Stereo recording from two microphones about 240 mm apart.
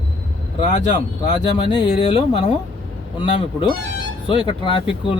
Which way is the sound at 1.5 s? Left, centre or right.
Left.